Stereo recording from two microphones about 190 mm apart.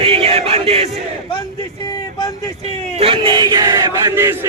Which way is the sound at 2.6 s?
30° right (ahead or behind).